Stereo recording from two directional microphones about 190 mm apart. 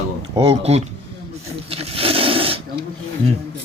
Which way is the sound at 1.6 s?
30° right (ahead or behind).